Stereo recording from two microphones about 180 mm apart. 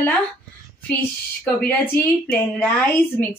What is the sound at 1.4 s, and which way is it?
A woman's voice, 10° left (ahead or behind).